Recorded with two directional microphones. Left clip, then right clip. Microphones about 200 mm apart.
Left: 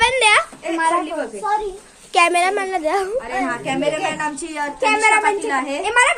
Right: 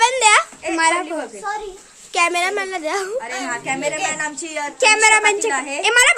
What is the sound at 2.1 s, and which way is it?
A woman's voice, centre (ahead or behind).